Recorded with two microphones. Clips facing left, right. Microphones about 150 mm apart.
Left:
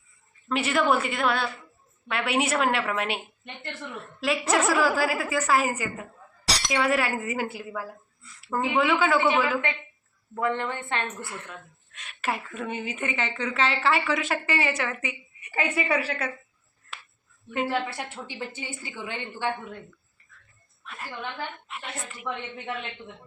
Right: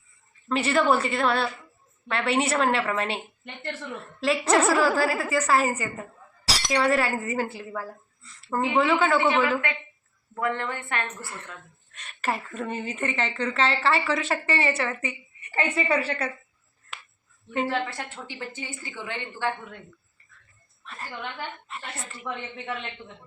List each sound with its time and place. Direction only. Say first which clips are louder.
0.4 s a woman's voice: right 2 dB; 5° left (ahead or behind)
4.2 s a woman's voice: right 3 dB; 5° left (ahead or behind)
10.3 s a woman's voice: left 1 dB; 20° left (ahead or behind)
11.0 s a woman's voice: left 1 dB; centre (ahead or behind)
17.5 s a woman's voice: even; 5° left (ahead or behind)
20.8 s a woman's voice: even; 5° left (ahead or behind)